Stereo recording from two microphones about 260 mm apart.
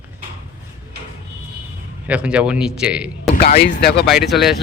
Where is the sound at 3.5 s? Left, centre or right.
Left.